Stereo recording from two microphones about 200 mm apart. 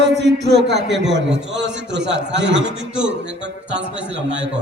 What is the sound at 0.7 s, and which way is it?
A man's voice, 60° right (ahead or behind).